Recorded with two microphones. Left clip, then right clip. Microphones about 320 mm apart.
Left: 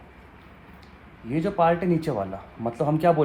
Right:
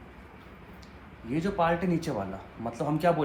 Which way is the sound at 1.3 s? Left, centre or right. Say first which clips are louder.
Left 5 dB; left.